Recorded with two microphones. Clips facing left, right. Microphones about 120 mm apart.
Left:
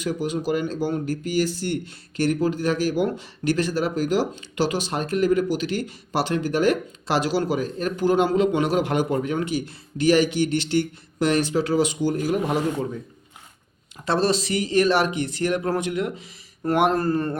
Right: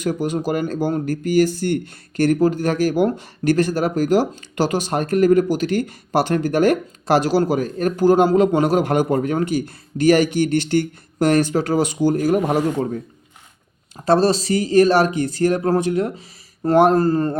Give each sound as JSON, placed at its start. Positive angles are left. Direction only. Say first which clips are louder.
{"t": 0.0, "sound": "speech", "louder": "right 4 dB", "side_deg": -45}
{"t": 13.9, "sound": "speech", "louder": "right 6 dB", "side_deg": -40}